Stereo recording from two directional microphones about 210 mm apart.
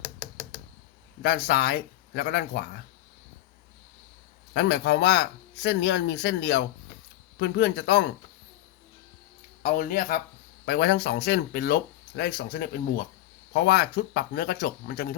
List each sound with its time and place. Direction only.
1.2 s speech: 50° left (ahead or behind)
4.5 s speech: 55° left (ahead or behind)
9.6 s speech: 40° left (ahead or behind)